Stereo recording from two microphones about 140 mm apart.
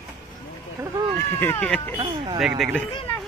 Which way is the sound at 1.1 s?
15° left (ahead or behind).